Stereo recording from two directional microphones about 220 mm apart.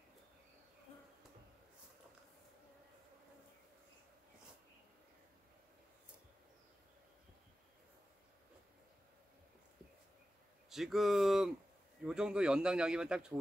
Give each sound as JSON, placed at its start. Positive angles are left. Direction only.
{"t": 10.7, "sound": "speech", "side_deg": 0}